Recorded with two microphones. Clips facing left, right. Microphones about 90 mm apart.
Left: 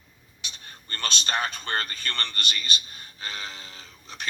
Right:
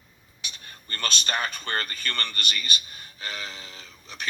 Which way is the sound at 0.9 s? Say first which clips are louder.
Right 1 dB; 50° right (ahead or behind).